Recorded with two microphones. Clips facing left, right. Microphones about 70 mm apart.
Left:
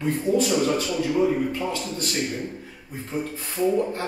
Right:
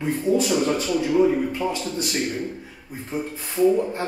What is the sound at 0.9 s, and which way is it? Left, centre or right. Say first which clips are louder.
A man's voice: right 3 dB; centre.